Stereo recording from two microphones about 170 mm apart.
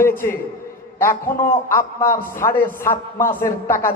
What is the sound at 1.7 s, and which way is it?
A man's voice, 15° left (ahead or behind).